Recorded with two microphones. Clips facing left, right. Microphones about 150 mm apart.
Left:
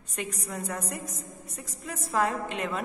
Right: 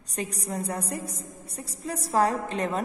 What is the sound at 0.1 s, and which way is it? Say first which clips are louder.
A woman's voice: right 3 dB; 35° right (ahead or behind).